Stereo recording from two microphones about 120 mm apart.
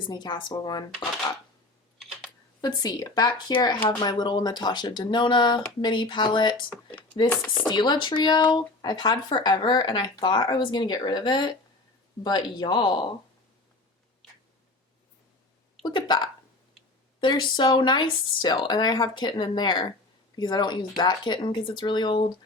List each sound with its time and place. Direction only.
0.1 s speech: 35° left (ahead or behind)
2.0 s computer keyboard: 5° right (ahead or behind)
2.6 s speech: 35° left (ahead or behind)
7.3 s speech: 10° left (ahead or behind)
7.8 s speech: 40° left (ahead or behind)
15.8 s a woman's voice: 40° left (ahead or behind)